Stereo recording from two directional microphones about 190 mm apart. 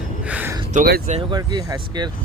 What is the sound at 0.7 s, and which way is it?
Speech, 55° right (ahead or behind).